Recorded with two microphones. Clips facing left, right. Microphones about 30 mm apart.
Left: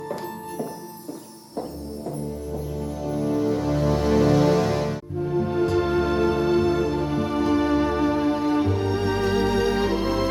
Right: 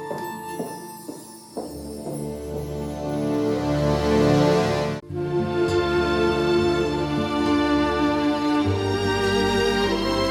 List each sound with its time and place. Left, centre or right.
3.0 s music: centre
5.2 s music: right